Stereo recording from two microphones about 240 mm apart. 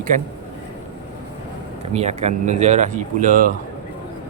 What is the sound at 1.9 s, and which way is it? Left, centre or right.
Speech, right.